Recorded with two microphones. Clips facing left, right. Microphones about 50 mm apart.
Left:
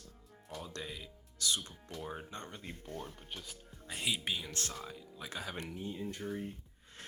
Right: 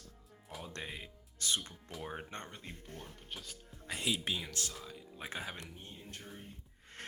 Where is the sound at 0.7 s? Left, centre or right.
Right.